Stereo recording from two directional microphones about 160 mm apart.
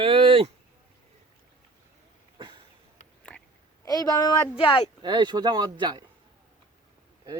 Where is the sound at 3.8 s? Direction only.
25° left (ahead or behind).